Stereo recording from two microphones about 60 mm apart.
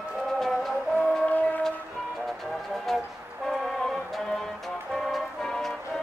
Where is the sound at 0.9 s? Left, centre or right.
Left.